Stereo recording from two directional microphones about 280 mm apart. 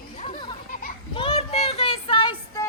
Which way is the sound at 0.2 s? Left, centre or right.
Centre.